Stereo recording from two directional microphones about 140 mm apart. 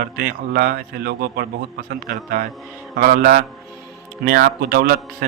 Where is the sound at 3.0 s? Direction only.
85° right.